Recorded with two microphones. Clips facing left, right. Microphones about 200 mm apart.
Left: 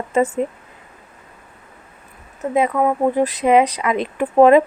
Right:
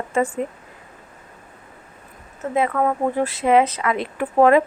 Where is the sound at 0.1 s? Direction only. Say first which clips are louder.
Left 4 dB; 20° left (ahead or behind).